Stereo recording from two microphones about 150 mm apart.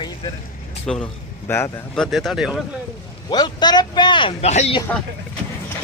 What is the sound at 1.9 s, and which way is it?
Speech, centre (ahead or behind).